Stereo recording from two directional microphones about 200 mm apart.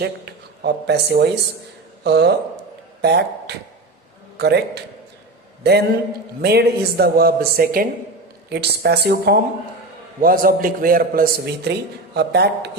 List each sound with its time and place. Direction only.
0.0 s a man's voice: 55° right (ahead or behind)